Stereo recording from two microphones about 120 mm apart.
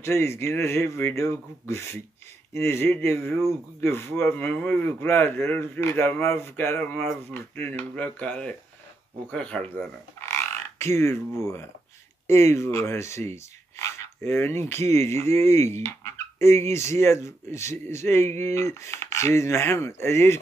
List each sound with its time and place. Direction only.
0.0 s speech: 20° left (ahead or behind)
10.2 s frog: 25° left (ahead or behind)
12.3 s speech: 20° left (ahead or behind)
15.8 s a sound: 20° left (ahead or behind)
16.7 s speech: 25° left (ahead or behind)